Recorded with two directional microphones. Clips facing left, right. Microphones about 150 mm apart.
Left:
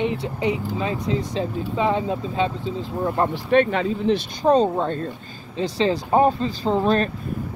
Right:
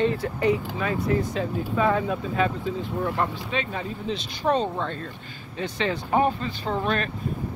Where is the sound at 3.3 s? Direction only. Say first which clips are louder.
Left 11 dB; 70° left (ahead or behind).